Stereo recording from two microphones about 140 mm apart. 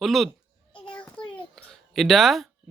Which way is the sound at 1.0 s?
10° left (ahead or behind).